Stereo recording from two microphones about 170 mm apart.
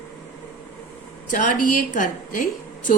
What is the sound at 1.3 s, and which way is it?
A woman's voice, 50° left (ahead or behind).